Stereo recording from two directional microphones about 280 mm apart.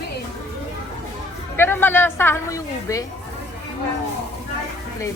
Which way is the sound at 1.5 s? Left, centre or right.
Centre.